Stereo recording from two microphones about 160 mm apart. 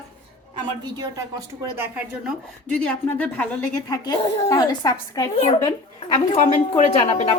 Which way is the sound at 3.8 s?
25° left (ahead or behind).